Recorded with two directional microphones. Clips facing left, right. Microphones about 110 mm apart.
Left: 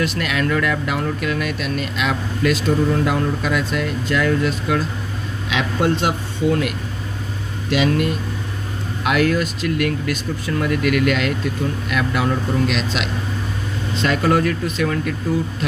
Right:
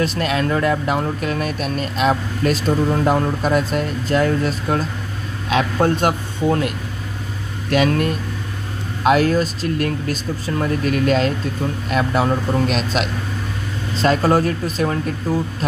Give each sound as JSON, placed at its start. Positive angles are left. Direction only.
{"t": 0.0, "sound": "speech", "side_deg": -35}
{"t": 7.7, "sound": "speech", "side_deg": -45}
{"t": 9.0, "sound": "speech", "side_deg": -35}